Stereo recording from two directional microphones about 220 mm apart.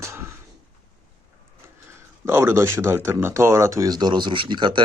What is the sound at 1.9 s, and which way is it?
Speech, 10° right (ahead or behind).